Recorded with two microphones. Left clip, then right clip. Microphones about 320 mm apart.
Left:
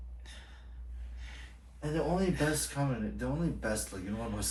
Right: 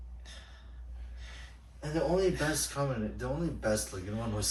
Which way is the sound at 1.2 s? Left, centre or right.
Centre.